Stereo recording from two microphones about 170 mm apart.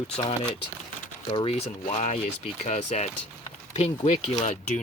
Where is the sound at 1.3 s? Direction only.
25° left (ahead or behind).